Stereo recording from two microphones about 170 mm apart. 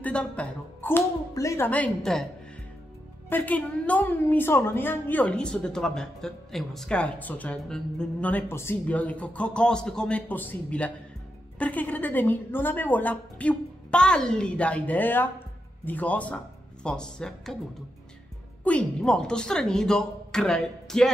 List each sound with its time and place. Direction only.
0.0 s speech: 5° left (ahead or behind)
3.3 s a woman's voice: 10° left (ahead or behind)
18.6 s speech: 5° left (ahead or behind)